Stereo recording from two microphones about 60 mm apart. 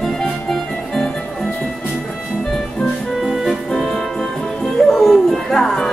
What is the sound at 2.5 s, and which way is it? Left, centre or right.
Music, centre.